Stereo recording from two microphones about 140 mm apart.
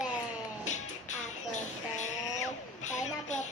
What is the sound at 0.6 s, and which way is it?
Music, 60° left (ahead or behind).